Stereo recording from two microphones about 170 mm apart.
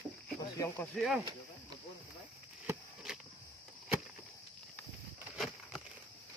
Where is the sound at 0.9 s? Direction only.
Centre (ahead or behind).